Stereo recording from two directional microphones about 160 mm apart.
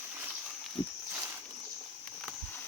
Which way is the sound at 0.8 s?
25° left (ahead or behind).